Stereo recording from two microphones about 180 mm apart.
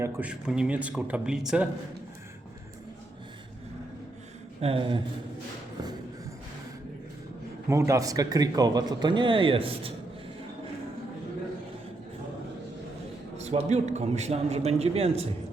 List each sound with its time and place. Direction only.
0.0 s speech: 5° right (ahead or behind)
4.6 s speech: 30° right (ahead or behind)
7.7 s speech: 15° right (ahead or behind)
13.3 s a man's voice: 40° right (ahead or behind)